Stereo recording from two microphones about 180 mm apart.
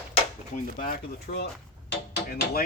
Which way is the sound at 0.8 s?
60° left (ahead or behind).